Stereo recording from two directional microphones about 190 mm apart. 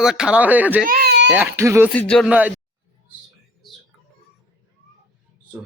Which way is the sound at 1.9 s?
5° left (ahead or behind).